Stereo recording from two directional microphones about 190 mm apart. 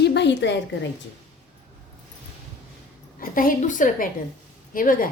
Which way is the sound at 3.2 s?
45° left (ahead or behind).